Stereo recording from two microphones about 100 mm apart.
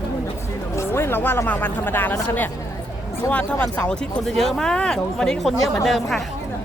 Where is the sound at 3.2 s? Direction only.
10° left (ahead or behind).